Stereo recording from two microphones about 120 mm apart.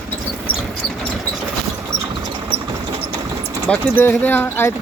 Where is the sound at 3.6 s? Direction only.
15° left (ahead or behind).